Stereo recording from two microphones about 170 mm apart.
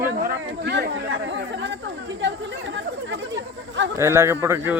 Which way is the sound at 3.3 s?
90° right.